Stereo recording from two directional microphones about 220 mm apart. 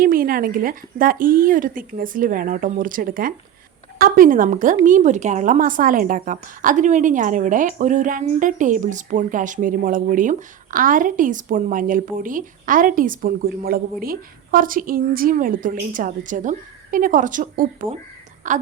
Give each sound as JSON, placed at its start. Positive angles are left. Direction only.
{"t": 0.0, "sound": "a woman's voice", "side_deg": -40}